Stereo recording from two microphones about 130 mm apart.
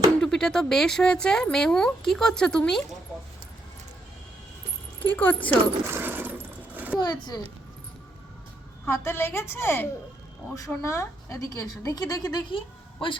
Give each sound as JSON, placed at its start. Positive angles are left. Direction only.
{"t": 0.2, "sound": "speech", "side_deg": 5}
{"t": 5.1, "sound": "speech", "side_deg": 15}
{"t": 5.9, "sound": "a sound", "side_deg": -15}
{"t": 7.0, "sound": "a child's voice", "side_deg": 35}
{"t": 8.9, "sound": "a woman's voice", "side_deg": 20}